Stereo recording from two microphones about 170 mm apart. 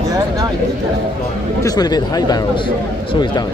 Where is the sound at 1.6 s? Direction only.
25° left (ahead or behind).